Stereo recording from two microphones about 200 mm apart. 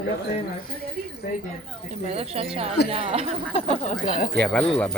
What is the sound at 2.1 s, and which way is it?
Speech, 30° right (ahead or behind).